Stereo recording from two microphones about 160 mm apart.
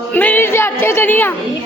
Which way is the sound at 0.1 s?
10° left (ahead or behind).